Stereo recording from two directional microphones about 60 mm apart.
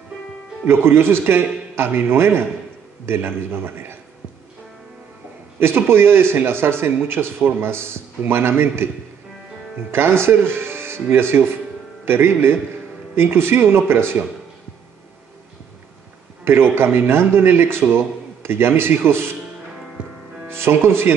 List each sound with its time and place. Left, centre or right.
0.7 s speech: right
5.6 s speech: right
9.8 s speech: right
16.4 s a man's voice: right
20.0 s music: centre
20.4 s speech: right